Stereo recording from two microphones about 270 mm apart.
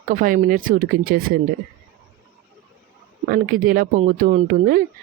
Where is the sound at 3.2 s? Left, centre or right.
Right.